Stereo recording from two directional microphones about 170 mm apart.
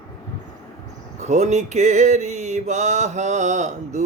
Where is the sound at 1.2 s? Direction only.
40° right (ahead or behind).